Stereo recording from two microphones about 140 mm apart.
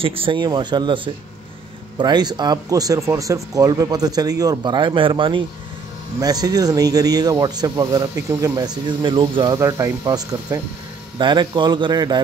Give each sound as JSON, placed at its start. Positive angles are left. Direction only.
{"t": 0.0, "sound": "speech", "side_deg": -40}